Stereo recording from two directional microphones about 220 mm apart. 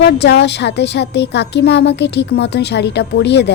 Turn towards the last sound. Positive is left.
turn(degrees=50)  # may be behind; listen again after turning